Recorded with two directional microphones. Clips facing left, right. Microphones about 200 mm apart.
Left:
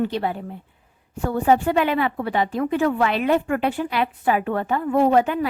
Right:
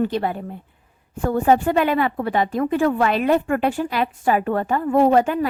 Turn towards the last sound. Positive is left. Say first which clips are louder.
# right 2 dB
turn(degrees=-40)  # may be behind; listen again after turning